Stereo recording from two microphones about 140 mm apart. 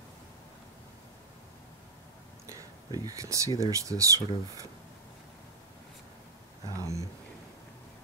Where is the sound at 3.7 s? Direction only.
25° right (ahead or behind).